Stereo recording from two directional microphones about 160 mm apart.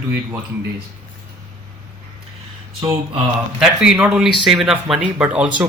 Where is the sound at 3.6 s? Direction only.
5° right (ahead or behind).